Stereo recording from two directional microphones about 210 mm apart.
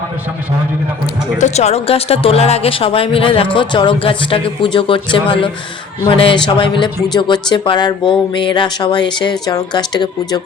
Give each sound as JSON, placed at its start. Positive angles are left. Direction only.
{"t": 1.4, "sound": "speech", "side_deg": 30}